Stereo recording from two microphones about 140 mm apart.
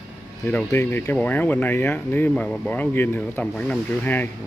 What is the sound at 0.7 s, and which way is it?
Speech, 15° left (ahead or behind).